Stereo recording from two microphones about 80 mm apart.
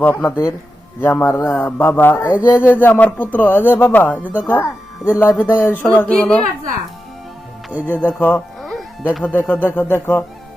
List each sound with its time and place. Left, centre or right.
0.0 s speech: left
2.2 s speech: centre
2.6 s speech: left
7.7 s speech: right
7.9 s speech: left